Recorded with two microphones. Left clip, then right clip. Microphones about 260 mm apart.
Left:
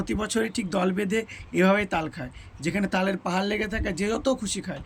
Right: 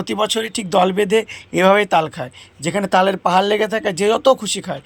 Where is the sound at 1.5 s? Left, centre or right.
Centre.